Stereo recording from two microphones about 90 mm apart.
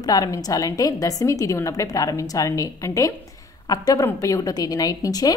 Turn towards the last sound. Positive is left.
turn(degrees=45)  # may be behind; listen again after turning